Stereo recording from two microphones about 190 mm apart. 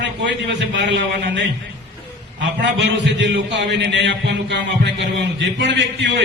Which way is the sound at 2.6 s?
65° right (ahead or behind).